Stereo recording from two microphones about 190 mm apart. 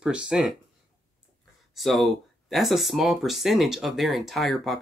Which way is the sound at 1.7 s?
Centre (ahead or behind).